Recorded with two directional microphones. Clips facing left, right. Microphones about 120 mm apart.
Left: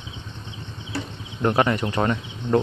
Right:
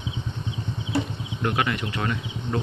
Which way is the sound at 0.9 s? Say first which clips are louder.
Right 5 dB; 20° right (ahead or behind).